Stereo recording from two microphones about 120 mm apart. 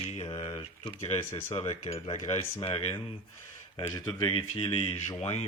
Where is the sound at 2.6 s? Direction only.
55° left (ahead or behind).